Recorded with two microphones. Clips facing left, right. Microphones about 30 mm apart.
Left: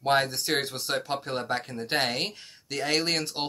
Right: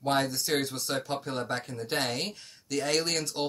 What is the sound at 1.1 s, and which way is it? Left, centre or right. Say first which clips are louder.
Speech: left 2 dB; left.